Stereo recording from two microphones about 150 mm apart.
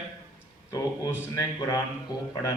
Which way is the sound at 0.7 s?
25° left (ahead or behind).